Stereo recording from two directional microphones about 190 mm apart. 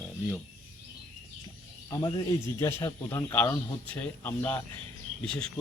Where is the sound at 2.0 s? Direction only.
20° left (ahead or behind).